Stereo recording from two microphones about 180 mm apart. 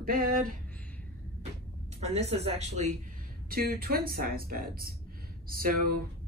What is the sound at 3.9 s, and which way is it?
A man's voice, 55° right (ahead or behind).